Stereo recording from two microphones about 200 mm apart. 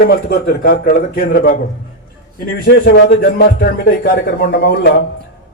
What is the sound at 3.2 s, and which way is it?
Speech, 55° left (ahead or behind).